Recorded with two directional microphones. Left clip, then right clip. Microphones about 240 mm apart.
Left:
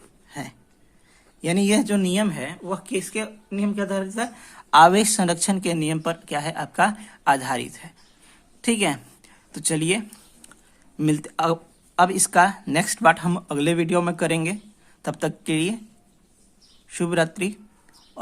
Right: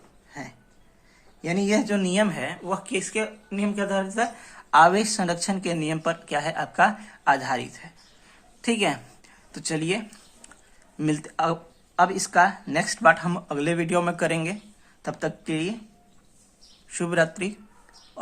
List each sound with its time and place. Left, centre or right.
0.3 s speech: left
16.9 s speech: left